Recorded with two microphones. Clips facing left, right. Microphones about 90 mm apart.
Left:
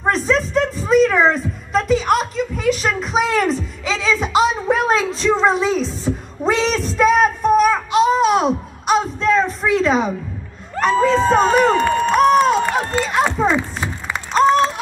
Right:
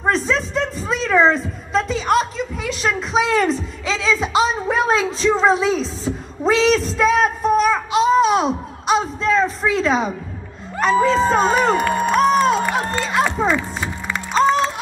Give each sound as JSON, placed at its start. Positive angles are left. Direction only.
{"t": 0.0, "sound": "a woman's voice", "side_deg": 0}
{"t": 11.9, "sound": "crowd", "side_deg": -15}
{"t": 12.2, "sound": "run", "side_deg": 5}
{"t": 13.2, "sound": "a sound", "side_deg": 5}
{"t": 14.3, "sound": "music", "side_deg": 0}